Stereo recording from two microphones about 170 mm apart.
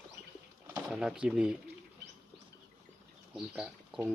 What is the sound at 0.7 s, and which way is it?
Speech, 5° right (ahead or behind).